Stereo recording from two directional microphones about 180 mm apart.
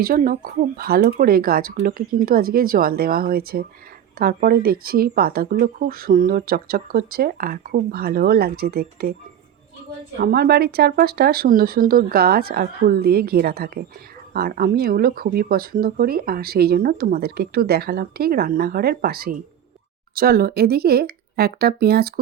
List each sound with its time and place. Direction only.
0.0 s speech: 55° right (ahead or behind)
10.2 s speech: 60° right (ahead or behind)